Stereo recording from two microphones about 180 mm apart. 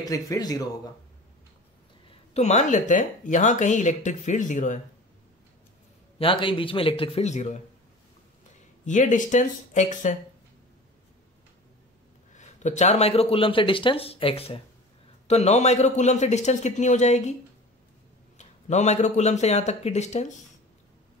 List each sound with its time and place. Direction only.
0.0 s speech: 20° left (ahead or behind)
2.0 s speech: 40° left (ahead or behind)
6.1 s speech: 30° left (ahead or behind)
8.8 s speech: 45° left (ahead or behind)
12.4 s speech: 40° left (ahead or behind)
18.4 s speech: 40° left (ahead or behind)